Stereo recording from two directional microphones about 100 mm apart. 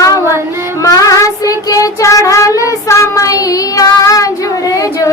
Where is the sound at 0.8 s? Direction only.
35° left (ahead or behind).